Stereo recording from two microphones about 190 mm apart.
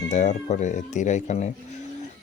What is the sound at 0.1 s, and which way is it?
Speech, 40° left (ahead or behind).